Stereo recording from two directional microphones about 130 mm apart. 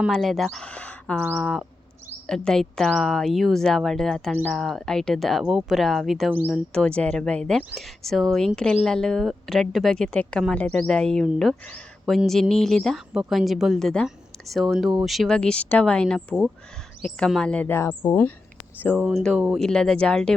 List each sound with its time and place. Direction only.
0.1 s speech: centre (ahead or behind)
6.3 s speech: 15° right (ahead or behind)
6.7 s speech: 10° left (ahead or behind)
19.0 s speech: centre (ahead or behind)